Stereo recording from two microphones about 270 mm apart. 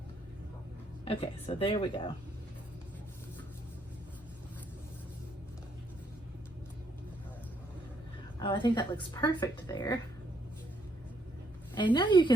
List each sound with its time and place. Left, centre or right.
1.0 s speech: left
8.4 s a woman's voice: centre
11.7 s a woman's voice: centre